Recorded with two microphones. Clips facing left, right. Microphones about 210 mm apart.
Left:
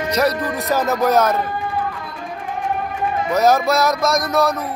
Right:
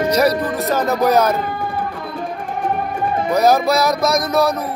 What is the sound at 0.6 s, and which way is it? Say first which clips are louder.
Music: right 1 dB; centre (ahead or behind).